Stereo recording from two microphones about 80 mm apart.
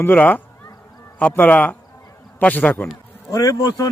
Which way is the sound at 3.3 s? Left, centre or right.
Left.